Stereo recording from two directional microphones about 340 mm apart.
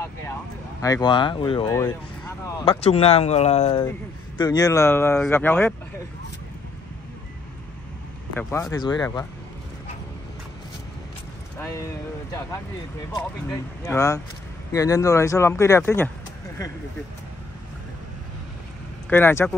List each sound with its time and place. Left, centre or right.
0.7 s speech: centre
8.4 s speech: centre
11.6 s a sound: centre
13.1 s speech: centre
19.0 s speech: centre